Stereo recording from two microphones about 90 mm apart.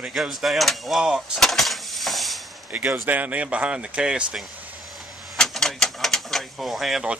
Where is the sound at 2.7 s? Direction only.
20° right (ahead or behind).